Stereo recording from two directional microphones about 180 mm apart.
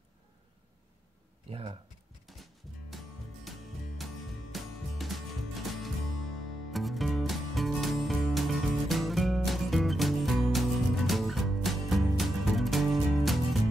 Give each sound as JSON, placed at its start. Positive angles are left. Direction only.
{"t": 1.5, "sound": "speech", "side_deg": -30}
{"t": 2.3, "sound": "music", "side_deg": 0}
{"t": 3.4, "sound": "music", "side_deg": 0}